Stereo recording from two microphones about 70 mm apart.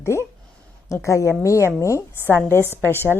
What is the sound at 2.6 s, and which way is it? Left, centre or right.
Speech, right.